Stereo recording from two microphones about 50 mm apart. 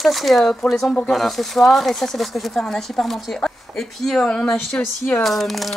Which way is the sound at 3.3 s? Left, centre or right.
Centre.